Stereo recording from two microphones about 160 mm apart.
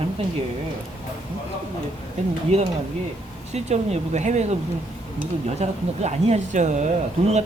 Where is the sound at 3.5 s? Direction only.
45° right (ahead or behind).